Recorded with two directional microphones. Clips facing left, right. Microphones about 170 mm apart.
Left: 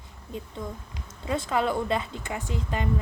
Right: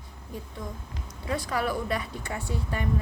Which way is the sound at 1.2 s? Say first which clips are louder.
Left 3 dB; 25° left (ahead or behind).